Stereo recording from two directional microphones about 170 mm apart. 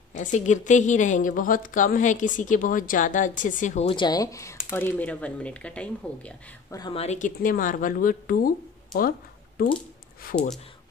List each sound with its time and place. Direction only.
0.1 s speech: 45° left (ahead or behind)
3.9 s speech: 25° left (ahead or behind); by 6.3 s 5° left (ahead or behind)
6.7 s speech: 25° left (ahead or behind)
7.0 s speech: 45° left (ahead or behind)